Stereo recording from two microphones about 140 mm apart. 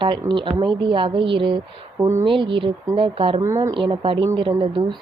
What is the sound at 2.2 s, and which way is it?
A woman's voice, 35° right (ahead or behind).